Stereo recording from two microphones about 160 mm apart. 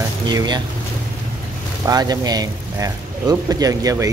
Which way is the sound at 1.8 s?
25° right (ahead or behind).